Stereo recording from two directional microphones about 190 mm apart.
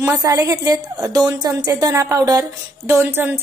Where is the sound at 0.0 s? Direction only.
20° right (ahead or behind).